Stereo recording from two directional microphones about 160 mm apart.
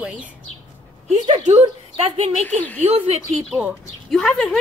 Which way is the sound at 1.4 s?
40° right (ahead or behind).